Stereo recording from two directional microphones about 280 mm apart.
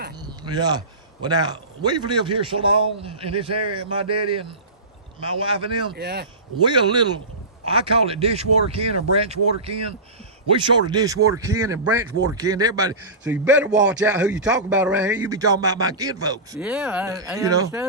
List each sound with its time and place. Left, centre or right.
0.3 s a man's voice: centre
5.4 s speech: centre
5.9 s speech: right
6.7 s a man's voice: centre